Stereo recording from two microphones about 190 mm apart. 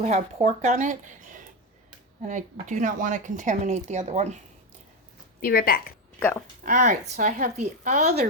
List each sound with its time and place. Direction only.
0.0 s speech: 35° right (ahead or behind)
2.2 s speech: 40° right (ahead or behind)
5.4 s a woman's voice: 50° left (ahead or behind)
6.1 s speech: 10° left (ahead or behind)
6.6 s speech: 40° right (ahead or behind)